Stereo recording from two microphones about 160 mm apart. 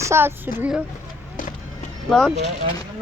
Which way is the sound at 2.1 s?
Centre (ahead or behind).